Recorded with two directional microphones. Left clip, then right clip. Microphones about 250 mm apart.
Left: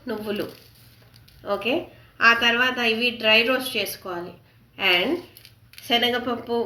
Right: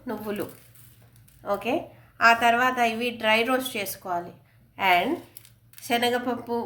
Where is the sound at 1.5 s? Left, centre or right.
Right.